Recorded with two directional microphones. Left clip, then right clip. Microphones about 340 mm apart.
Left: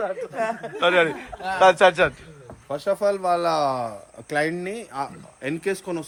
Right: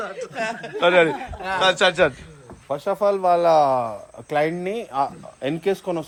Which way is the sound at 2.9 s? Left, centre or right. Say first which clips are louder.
Right 3 dB; centre.